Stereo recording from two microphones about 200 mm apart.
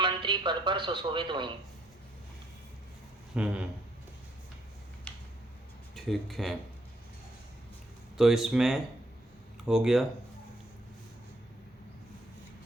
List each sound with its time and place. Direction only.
0.0 s speech: 25° right (ahead or behind)
3.3 s speech: 5° right (ahead or behind)
5.1 s a sound: 5° left (ahead or behind)
5.9 s speech: centre (ahead or behind)
8.2 s speech: centre (ahead or behind)